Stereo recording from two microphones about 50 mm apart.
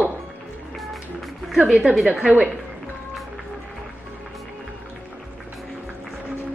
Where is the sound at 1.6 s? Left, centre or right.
Right.